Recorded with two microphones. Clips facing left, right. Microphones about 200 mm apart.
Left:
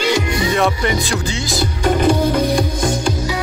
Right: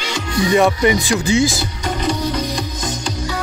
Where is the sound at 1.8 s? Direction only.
50° left (ahead or behind).